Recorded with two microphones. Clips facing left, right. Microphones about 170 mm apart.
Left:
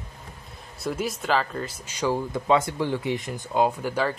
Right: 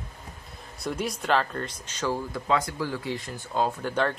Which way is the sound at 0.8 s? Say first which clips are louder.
Left 2 dB; centre (ahead or behind).